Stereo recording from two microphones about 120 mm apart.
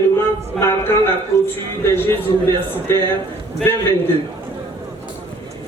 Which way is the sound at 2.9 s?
20° left (ahead or behind).